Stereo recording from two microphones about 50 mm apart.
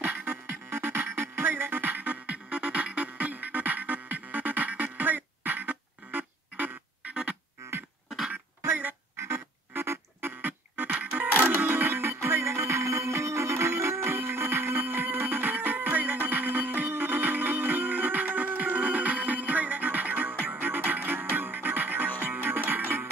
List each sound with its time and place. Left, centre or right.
0.0 s music: right
0.7 s music: right
9.1 s music: right
10.9 s music: right
11.4 s music: right